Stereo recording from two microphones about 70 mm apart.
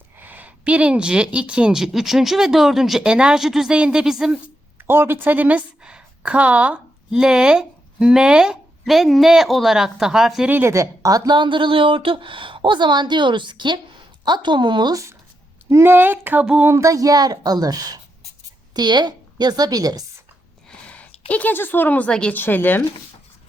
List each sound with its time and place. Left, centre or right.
0.2 s speech: right; by 4.4 s centre
4.4 s speech: right; by 10.4 s centre
10.7 s speech: right
12.8 s a woman's voice: right
15.7 s speech: right
16.6 s a woman's voice: right
18.7 s a woman's voice: right
20.7 s a woman's voice: centre
22.4 s speech: left